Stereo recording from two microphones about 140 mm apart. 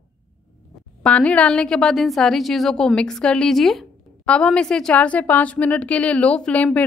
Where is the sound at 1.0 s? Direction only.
10° left (ahead or behind).